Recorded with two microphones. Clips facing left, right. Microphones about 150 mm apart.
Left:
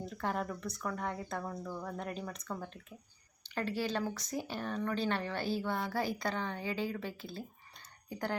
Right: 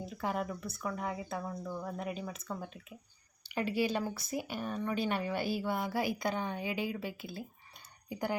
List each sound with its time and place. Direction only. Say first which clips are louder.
0.0 s speech: right 1 dB; 5° right (ahead or behind)